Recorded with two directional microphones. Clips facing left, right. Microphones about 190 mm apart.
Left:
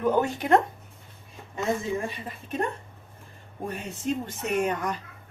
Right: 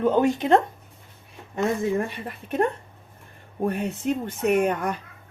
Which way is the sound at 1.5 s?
60° right (ahead or behind).